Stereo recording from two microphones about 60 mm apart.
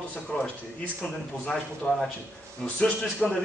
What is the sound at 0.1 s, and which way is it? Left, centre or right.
Speech, centre.